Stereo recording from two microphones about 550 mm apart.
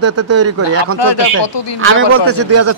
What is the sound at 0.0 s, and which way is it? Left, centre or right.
Speech, right.